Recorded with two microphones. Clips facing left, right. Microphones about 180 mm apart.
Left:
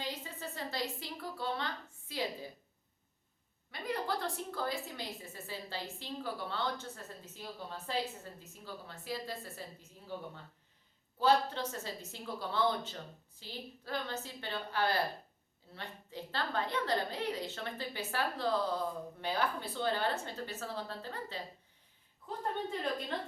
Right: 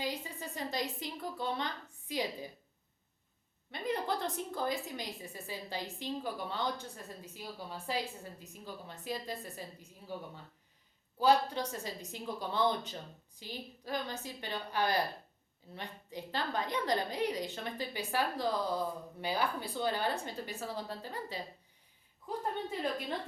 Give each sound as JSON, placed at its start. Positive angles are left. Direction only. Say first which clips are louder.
{"t": 0.0, "sound": "a woman's voice", "louder": "right 3 dB", "side_deg": -15}
{"t": 3.7, "sound": "a woman's voice", "louder": "right 2 dB", "side_deg": -20}